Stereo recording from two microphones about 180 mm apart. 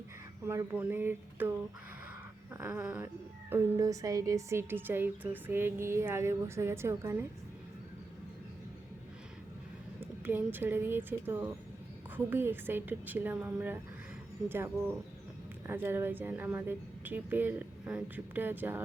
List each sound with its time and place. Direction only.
0.4 s a woman's voice: 10° right (ahead or behind)
10.0 s a woman's voice: 10° right (ahead or behind)